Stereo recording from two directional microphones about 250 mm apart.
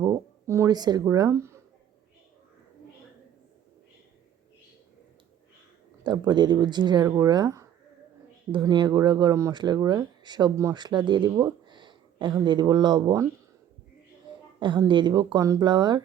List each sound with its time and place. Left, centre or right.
0.0 s a sound: centre
6.0 s speech: centre
14.6 s speech: centre